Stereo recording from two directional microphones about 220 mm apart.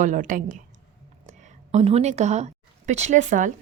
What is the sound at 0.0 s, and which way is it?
A woman's voice, 35° right (ahead or behind).